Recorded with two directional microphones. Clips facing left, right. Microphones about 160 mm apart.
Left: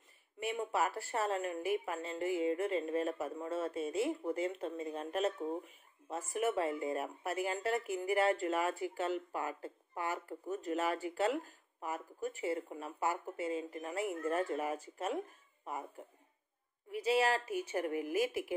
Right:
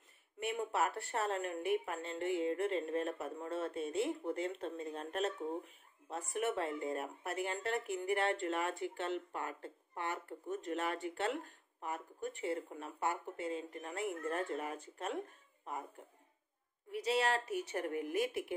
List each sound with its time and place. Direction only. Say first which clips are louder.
0.4 s speech: left 1 dB; centre (ahead or behind)
11.0 s speech: left 1 dB; 40° right (ahead or behind)
11.8 s speech: left 2 dB; 5° left (ahead or behind)
17.0 s speech: left 3 dB; 5° left (ahead or behind)